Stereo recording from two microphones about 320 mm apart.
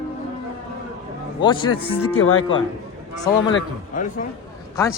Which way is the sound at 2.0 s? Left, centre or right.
Left.